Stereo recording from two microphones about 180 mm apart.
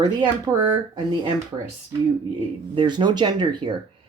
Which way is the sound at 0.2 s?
20° right (ahead or behind).